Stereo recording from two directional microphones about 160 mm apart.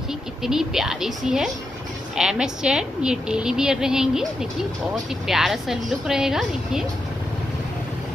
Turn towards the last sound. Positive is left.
turn(degrees=-5)  # may be behind; listen again after turning